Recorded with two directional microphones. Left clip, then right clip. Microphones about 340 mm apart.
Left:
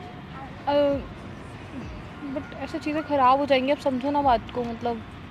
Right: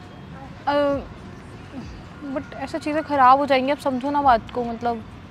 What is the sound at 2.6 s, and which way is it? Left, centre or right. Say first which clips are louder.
Speech: right 4 dB; right.